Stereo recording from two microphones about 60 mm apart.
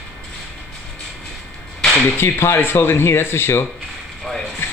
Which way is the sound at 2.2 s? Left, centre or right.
Left.